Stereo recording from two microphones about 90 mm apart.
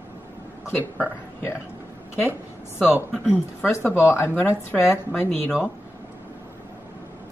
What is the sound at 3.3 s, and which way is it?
Speech, 20° left (ahead or behind).